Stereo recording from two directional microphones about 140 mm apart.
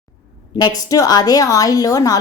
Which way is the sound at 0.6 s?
25° left (ahead or behind).